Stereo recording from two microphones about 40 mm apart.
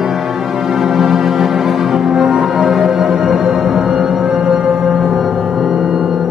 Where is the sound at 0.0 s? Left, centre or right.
Centre.